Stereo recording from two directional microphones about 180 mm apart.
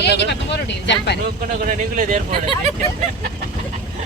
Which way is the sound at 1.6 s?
45° right (ahead or behind).